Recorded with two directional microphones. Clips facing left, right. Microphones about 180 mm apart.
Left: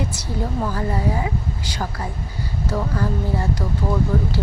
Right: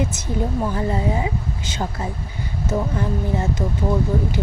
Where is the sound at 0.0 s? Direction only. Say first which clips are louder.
Right 3 dB; 20° right (ahead or behind).